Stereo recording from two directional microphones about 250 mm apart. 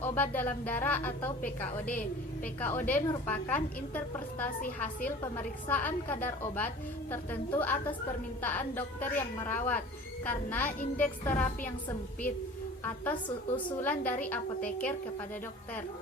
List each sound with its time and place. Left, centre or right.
0.0 s a woman's voice: centre
2.4 s a woman's voice: centre
13.2 s a woman's voice: centre
13.8 s a woman's voice: centre